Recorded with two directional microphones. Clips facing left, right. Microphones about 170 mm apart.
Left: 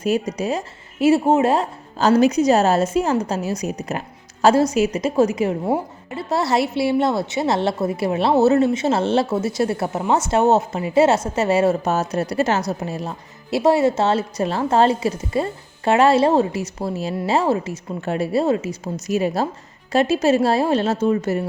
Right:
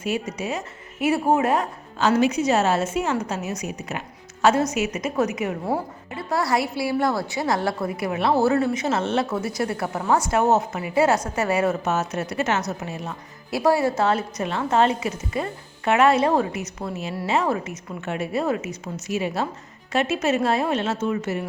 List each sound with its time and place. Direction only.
0.0 s a woman's voice: 40° left (ahead or behind)
19.0 s speech: 40° left (ahead or behind)